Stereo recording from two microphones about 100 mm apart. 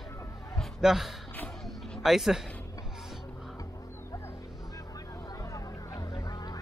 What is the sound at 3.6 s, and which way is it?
Vehicle, 30° left (ahead or behind).